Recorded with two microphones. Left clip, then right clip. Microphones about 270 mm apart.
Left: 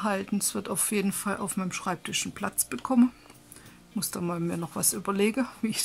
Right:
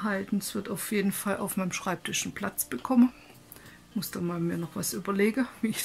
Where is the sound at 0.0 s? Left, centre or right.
Centre.